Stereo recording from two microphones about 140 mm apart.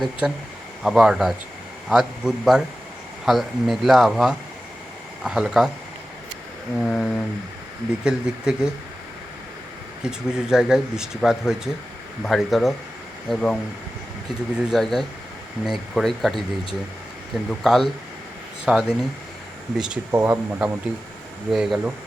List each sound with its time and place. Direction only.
0.0 s speech: 5° right (ahead or behind)
6.7 s speech: centre (ahead or behind)
10.0 s speech: 5° right (ahead or behind)
14.6 s speech: centre (ahead or behind)
17.5 s speech: centre (ahead or behind)
20.1 s speech: 15° right (ahead or behind)
21.5 s speech: 5° right (ahead or behind)